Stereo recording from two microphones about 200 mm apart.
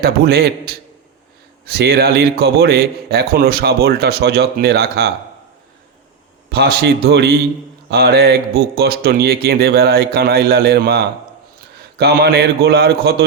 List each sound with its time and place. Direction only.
0.0 s a man's voice: 50° right (ahead or behind)
6.5 s a man's voice: 50° right (ahead or behind)